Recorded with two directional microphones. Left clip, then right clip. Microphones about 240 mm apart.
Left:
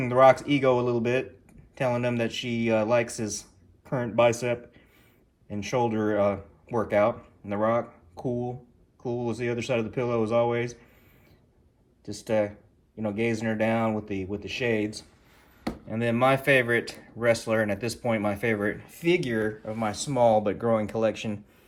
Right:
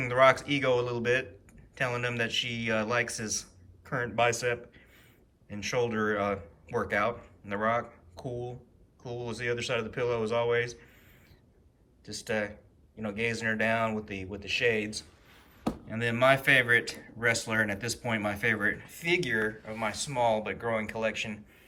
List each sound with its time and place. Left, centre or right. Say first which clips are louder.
0.0 s speech: left 4 dB; centre
12.0 s speech: left 6 dB; left